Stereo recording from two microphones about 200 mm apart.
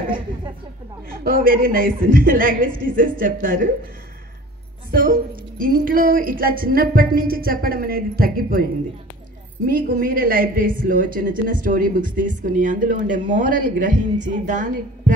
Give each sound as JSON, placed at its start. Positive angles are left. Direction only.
{"t": 1.2, "sound": "speech", "side_deg": -45}
{"t": 4.9, "sound": "speech", "side_deg": -45}
{"t": 9.7, "sound": "a woman's voice", "side_deg": -45}